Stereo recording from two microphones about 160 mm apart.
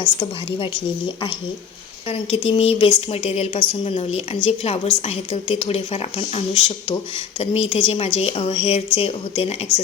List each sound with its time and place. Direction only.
0.0 s a woman's voice: 30° left (ahead or behind)